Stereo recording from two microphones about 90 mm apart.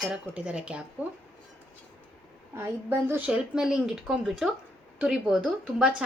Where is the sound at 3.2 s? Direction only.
10° right (ahead or behind).